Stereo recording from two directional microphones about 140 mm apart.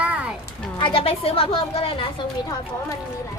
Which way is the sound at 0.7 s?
35° left (ahead or behind).